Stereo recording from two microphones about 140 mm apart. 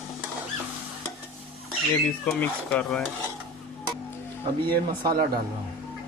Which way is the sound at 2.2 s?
15° left (ahead or behind).